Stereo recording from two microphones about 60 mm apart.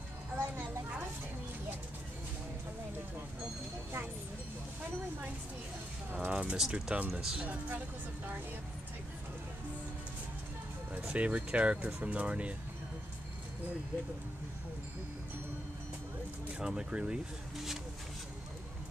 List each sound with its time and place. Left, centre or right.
0.4 s a sound: right
6.1 s a sound: right
6.7 s speech: right
7.2 s speech: centre
7.4 s speech: right
10.9 s speech: right
16.5 s speech: centre